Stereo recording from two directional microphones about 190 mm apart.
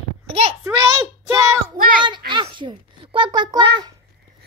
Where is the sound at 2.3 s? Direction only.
25° right (ahead or behind).